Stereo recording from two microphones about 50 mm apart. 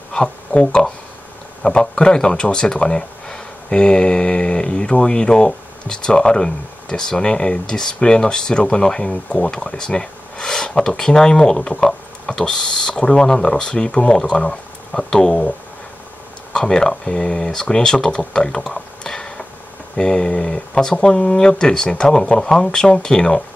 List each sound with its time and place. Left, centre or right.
0.1 s speech: centre
16.5 s speech: centre